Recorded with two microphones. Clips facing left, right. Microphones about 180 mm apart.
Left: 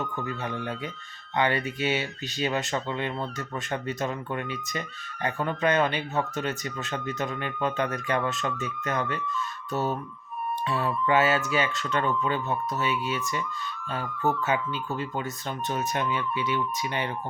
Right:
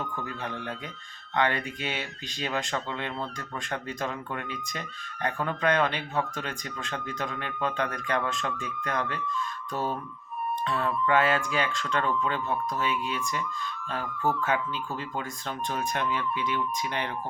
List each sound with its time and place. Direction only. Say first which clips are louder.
0.0 s speech: left 3 dB; centre (ahead or behind)